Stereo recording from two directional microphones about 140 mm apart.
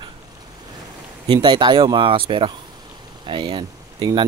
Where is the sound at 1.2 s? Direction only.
35° right (ahead or behind).